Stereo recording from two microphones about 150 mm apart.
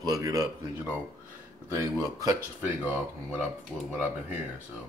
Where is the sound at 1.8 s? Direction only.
20° right (ahead or behind).